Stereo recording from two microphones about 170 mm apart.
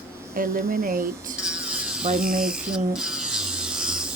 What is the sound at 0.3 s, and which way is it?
Speech, 55° right (ahead or behind).